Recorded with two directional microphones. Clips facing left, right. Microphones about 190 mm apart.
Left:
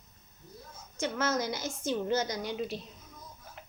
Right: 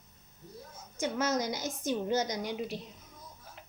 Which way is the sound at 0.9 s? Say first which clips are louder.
Even; 15° right (ahead or behind).